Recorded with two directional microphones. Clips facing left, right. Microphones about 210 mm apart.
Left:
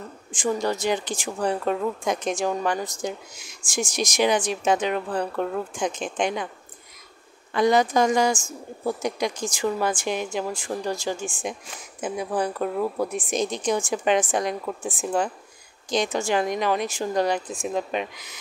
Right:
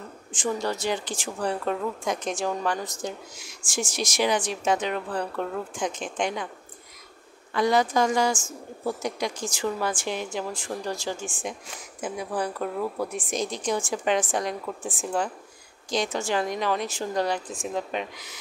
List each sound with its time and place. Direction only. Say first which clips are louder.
0.3 s a woman's voice: left 3 dB; 10° left (ahead or behind)
7.5 s a woman's voice: left 3 dB; 20° left (ahead or behind)